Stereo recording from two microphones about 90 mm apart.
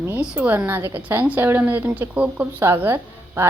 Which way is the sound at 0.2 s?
20° right (ahead or behind).